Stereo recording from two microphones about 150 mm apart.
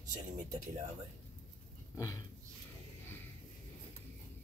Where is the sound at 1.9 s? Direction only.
20° left (ahead or behind).